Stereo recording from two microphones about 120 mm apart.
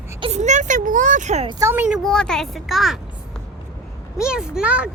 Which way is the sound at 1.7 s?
15° right (ahead or behind).